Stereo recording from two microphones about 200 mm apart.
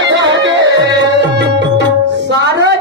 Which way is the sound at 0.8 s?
60° right (ahead or behind).